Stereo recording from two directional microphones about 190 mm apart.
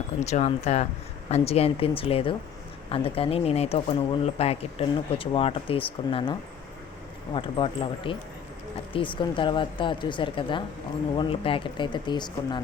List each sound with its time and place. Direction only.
0.2 s speech: 35° left (ahead or behind)
7.3 s speech: 25° left (ahead or behind)